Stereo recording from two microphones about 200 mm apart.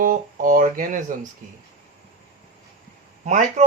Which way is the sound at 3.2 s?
35° right (ahead or behind).